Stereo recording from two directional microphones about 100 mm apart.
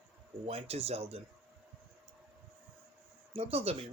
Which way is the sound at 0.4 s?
85° right.